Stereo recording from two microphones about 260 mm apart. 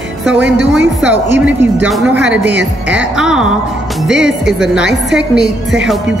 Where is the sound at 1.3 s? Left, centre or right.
Centre.